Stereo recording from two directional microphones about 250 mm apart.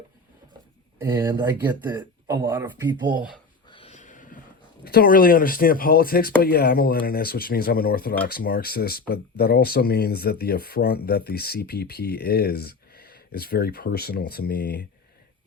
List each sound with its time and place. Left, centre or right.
1.1 s speech: centre
3.7 s a sound: left
4.8 s speech: left